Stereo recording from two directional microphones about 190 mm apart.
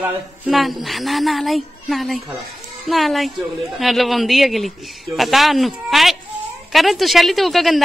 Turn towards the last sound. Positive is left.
turn(degrees=0)  # may be behind; listen again after turning